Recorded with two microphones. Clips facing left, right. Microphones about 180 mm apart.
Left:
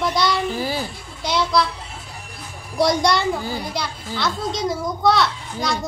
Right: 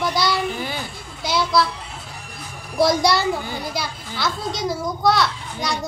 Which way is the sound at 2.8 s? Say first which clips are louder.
Right 1 dB; 5° right (ahead or behind).